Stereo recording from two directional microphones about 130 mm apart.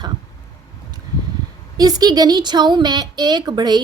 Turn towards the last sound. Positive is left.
turn(degrees=-35)  # may be behind; listen again after turning